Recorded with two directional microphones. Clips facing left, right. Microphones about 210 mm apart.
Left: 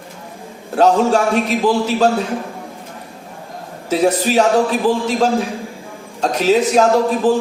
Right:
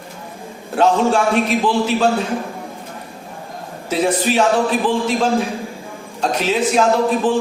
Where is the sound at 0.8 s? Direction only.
40° left (ahead or behind).